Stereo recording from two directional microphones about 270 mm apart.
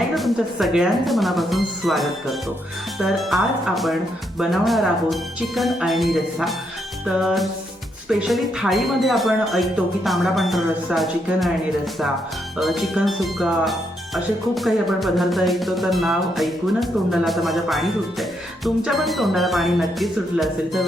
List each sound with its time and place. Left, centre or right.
0.1 s speech: centre
12.5 s speech: centre